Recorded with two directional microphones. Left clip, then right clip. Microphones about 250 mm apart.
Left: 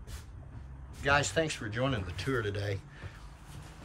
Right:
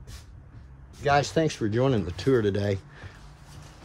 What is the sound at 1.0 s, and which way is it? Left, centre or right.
Speech, right.